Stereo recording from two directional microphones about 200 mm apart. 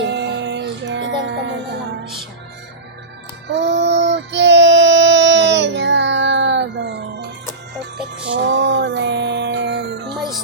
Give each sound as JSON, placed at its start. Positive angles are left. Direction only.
{"t": 0.0, "sound": "music", "side_deg": -60}
{"t": 3.5, "sound": "child singing", "side_deg": -60}
{"t": 8.3, "sound": "music", "side_deg": -60}